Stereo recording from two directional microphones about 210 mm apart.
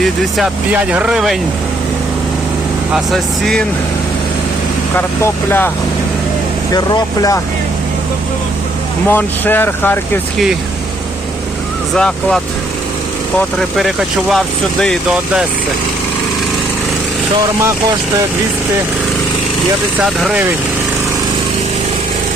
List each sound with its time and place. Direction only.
0.0 s speech: centre (ahead or behind)
2.9 s speech: centre (ahead or behind)
4.9 s speech: 10° left (ahead or behind)
6.7 s speech: 20° left (ahead or behind)
9.0 s speech: 10° left (ahead or behind)
11.9 s speech: 5° left (ahead or behind)
13.6 s speech: centre (ahead or behind)